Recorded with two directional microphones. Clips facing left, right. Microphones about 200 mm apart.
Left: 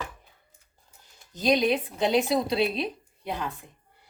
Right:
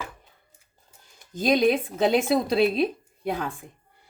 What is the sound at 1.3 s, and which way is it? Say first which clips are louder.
A woman's voice: right 3 dB; 50° right (ahead or behind).